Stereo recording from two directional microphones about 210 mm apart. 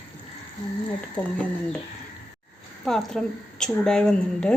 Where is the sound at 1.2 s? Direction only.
5° left (ahead or behind).